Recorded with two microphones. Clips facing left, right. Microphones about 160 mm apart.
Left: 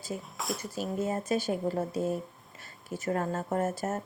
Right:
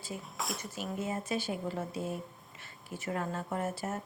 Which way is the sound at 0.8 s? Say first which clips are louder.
Left 5 dB; 40° left (ahead or behind).